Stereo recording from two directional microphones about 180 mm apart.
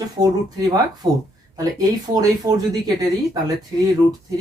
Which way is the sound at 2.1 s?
20° right (ahead or behind).